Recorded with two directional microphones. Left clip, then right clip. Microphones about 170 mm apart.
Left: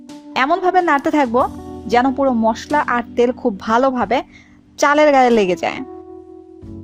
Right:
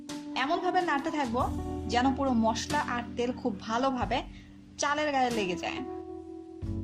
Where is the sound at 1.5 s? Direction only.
Centre (ahead or behind).